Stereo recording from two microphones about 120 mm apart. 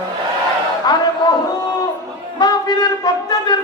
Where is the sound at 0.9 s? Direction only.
35° left (ahead or behind).